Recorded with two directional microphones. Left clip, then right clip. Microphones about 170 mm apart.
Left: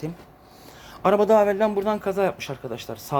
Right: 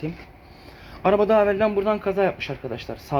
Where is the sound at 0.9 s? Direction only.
25° left (ahead or behind).